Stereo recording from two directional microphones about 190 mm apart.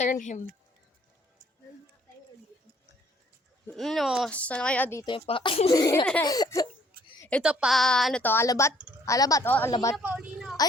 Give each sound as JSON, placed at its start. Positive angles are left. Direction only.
{"t": 0.0, "sound": "speech", "side_deg": 40}
{"t": 3.7, "sound": "speech", "side_deg": 0}
{"t": 5.0, "sound": "speech", "side_deg": 25}
{"t": 7.2, "sound": "a sound", "side_deg": 5}
{"t": 7.4, "sound": "a woman's voice", "side_deg": 0}
{"t": 9.9, "sound": "a sound", "side_deg": -5}